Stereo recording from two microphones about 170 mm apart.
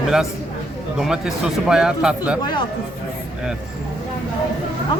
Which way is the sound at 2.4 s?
25° left (ahead or behind).